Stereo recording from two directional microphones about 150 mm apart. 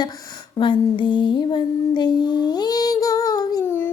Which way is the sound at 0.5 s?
35° left (ahead or behind).